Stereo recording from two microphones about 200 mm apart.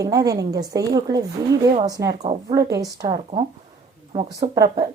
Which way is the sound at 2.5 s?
15° right (ahead or behind).